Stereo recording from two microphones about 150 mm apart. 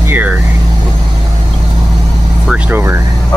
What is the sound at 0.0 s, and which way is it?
Vehicle, 10° right (ahead or behind).